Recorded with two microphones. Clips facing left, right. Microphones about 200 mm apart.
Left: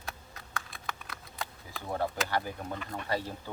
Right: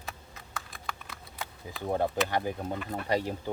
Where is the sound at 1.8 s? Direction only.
20° right (ahead or behind).